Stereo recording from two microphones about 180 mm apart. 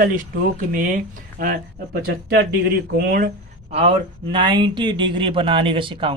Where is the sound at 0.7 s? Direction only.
50° right (ahead or behind).